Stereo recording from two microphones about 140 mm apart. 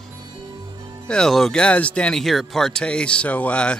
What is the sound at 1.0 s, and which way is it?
Speech, 5° left (ahead or behind).